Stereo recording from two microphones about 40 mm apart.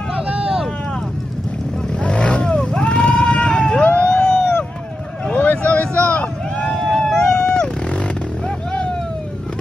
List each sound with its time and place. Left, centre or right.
0.1 s vehicle: right
1.9 s vehicle: left
4.0 s a sound: centre
5.3 s vehicle: left
5.6 s vehicle: left